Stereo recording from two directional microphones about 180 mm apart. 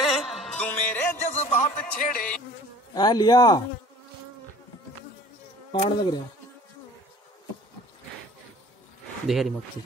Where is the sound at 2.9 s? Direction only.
20° left (ahead or behind).